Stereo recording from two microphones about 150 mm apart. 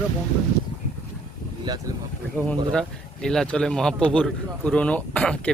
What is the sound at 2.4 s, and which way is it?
A man's voice, 5° left (ahead or behind).